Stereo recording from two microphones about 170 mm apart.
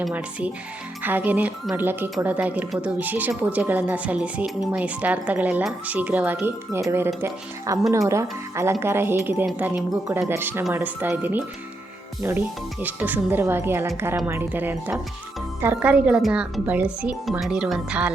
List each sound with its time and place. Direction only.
0.0 s speech: 5° right (ahead or behind)
12.8 s speech: 10° right (ahead or behind)